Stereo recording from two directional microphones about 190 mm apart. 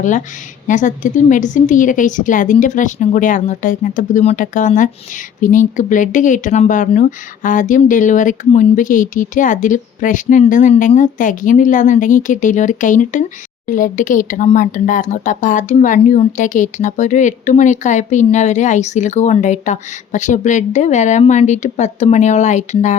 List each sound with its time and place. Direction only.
0.7 s speech: 40° left (ahead or behind)